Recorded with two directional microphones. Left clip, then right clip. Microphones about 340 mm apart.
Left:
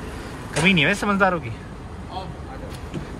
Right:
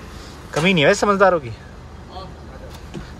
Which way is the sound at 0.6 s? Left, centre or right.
Centre.